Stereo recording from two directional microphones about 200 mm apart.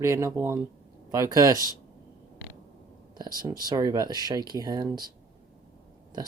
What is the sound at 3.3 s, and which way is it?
Speech, 45° right (ahead or behind).